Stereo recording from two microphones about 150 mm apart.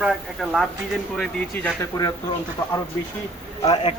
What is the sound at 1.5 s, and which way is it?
Speech, 10° left (ahead or behind).